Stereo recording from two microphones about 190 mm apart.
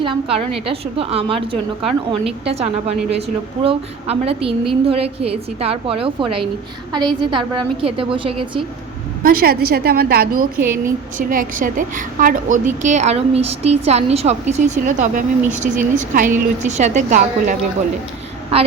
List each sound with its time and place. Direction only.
0.0 s a woman's voice: 30° right (ahead or behind)
3.6 s a woman's voice: 30° right (ahead or behind)
9.2 s a woman's voice: 50° right (ahead or behind)
10.6 s speech: 10° right (ahead or behind)
11.2 s a woman's voice: 45° right (ahead or behind)
18.5 s a woman's voice: 30° right (ahead or behind)